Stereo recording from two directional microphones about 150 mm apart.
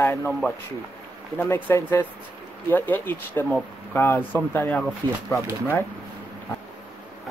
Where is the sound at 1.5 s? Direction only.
15° left (ahead or behind).